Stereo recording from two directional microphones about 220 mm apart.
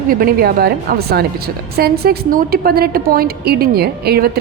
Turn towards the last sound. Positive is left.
turn(degrees=-45)  # may be behind; listen again after turning